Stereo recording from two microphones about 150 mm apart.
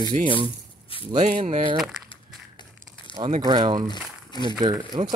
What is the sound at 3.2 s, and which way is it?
Speech, 35° right (ahead or behind).